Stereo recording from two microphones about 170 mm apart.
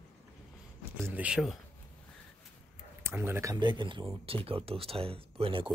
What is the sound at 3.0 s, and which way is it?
Speech, 15° right (ahead or behind).